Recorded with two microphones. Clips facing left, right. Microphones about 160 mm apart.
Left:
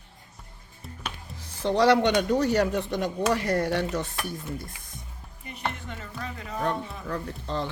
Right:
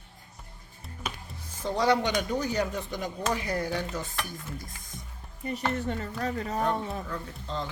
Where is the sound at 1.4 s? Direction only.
75° left (ahead or behind).